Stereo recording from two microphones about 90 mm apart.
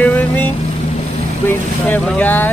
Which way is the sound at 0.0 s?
20° left (ahead or behind).